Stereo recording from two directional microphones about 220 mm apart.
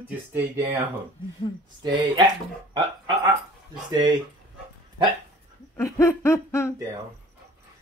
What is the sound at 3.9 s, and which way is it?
Speech, 20° right (ahead or behind).